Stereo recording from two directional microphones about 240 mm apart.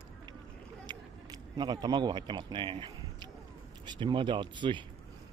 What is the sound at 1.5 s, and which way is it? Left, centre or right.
A man's voice, centre.